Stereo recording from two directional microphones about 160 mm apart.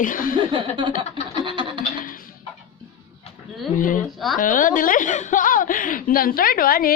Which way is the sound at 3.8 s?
55° left (ahead or behind).